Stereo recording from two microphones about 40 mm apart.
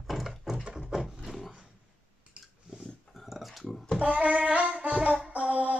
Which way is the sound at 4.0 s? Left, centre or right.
Right.